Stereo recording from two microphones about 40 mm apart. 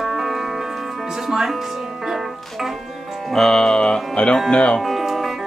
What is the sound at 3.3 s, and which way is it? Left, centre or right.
Music, centre.